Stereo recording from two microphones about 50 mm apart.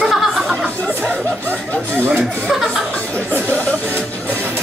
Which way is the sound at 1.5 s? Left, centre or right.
Right.